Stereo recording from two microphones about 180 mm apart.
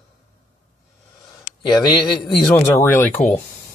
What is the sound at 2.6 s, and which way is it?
Speech, 15° left (ahead or behind).